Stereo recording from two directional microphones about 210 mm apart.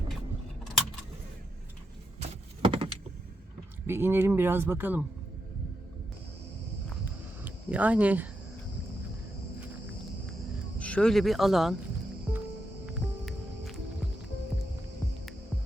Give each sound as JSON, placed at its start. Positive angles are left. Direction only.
{"t": 2.6, "sound": "power windows", "side_deg": -25}
{"t": 3.8, "sound": "speech", "side_deg": -10}
{"t": 7.4, "sound": "speech", "side_deg": -5}
{"t": 10.8, "sound": "speech", "side_deg": 5}
{"t": 12.8, "sound": "music", "side_deg": 0}